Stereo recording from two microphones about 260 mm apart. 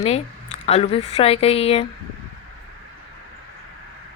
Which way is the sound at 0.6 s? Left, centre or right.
Left.